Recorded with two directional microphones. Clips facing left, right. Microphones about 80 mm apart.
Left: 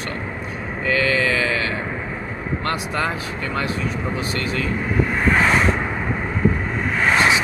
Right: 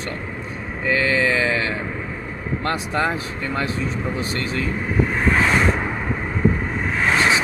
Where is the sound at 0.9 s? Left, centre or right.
Right.